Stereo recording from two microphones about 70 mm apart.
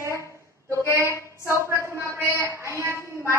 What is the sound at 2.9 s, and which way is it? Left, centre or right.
Speech, left.